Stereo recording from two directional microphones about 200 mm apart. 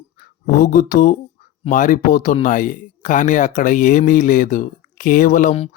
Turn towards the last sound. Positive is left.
turn(degrees=35)  # may be behind; listen again after turning